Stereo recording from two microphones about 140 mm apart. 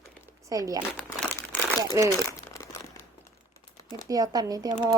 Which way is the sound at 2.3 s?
20° left (ahead or behind).